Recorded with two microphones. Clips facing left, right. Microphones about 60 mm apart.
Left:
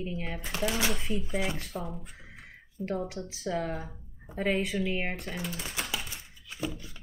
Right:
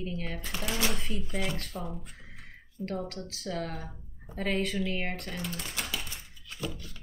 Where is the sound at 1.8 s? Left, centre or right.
Centre.